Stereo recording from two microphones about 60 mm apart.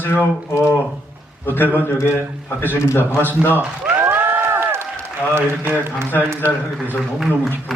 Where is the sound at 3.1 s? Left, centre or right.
Left.